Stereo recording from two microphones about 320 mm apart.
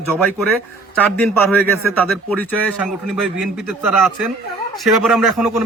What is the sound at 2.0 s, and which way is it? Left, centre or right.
A man's voice, centre.